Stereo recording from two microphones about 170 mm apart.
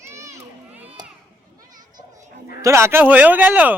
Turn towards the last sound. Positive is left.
turn(degrees=-10)  # may be behind; listen again after turning